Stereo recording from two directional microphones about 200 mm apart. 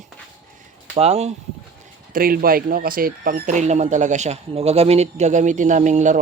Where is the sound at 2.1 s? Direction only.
45° right (ahead or behind).